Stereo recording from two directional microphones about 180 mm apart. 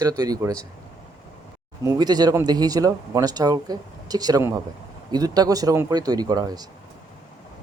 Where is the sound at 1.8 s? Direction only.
20° right (ahead or behind).